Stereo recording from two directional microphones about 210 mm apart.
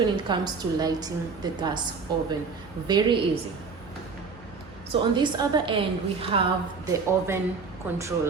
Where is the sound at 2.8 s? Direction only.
20° right (ahead or behind).